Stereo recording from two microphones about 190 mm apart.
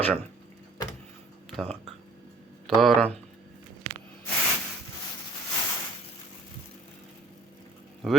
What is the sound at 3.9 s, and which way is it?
Spray, 30° right (ahead or behind).